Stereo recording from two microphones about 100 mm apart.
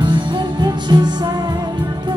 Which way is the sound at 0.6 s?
45° right (ahead or behind).